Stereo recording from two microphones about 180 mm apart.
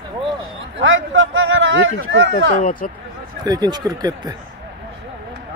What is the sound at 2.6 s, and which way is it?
Speech, 50° left (ahead or behind).